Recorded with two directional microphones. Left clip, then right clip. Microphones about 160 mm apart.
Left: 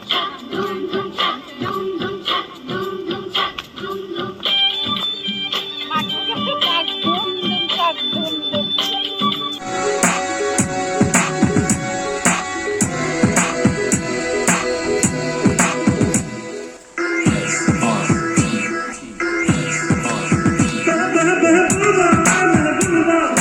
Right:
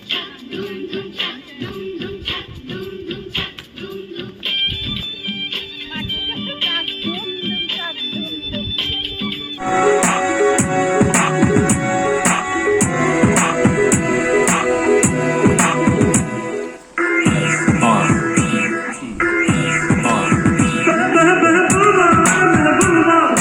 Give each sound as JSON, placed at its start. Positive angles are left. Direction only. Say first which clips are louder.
{"t": 4.5, "sound": "music", "louder": "left 3 dB", "side_deg": -30}
{"t": 7.1, "sound": "music", "louder": "left 4 dB", "side_deg": -30}
{"t": 8.1, "sound": "music", "louder": "left 4 dB", "side_deg": 0}
{"t": 9.6, "sound": "music", "louder": "right 5 dB", "side_deg": 0}